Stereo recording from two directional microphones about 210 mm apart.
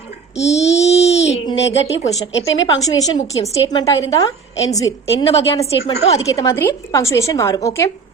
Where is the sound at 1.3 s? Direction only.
30° left (ahead or behind).